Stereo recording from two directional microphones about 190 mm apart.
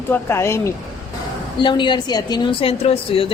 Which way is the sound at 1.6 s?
25° left (ahead or behind).